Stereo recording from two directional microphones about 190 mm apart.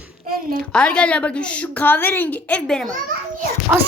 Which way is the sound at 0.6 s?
5° left (ahead or behind).